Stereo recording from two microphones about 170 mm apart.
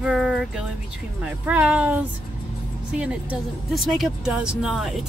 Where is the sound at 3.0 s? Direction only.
5° right (ahead or behind).